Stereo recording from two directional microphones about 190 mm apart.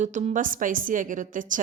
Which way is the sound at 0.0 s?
40° right (ahead or behind).